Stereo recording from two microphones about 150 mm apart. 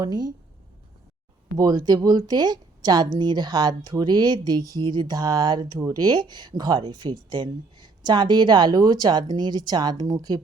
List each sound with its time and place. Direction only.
0.0 s speech: 25° right (ahead or behind)
1.5 s speech: 25° right (ahead or behind)